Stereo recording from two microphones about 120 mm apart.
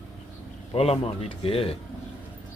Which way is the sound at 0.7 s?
55° left (ahead or behind).